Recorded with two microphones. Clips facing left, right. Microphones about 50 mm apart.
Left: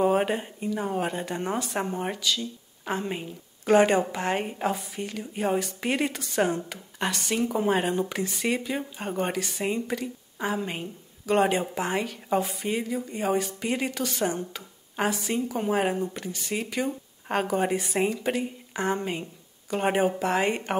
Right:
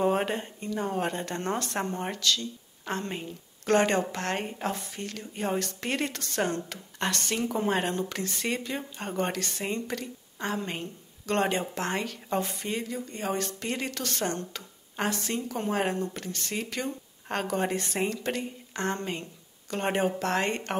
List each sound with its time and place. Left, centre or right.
0.0 s speech: centre